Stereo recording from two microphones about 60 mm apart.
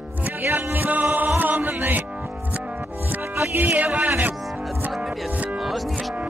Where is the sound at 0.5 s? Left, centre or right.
Right.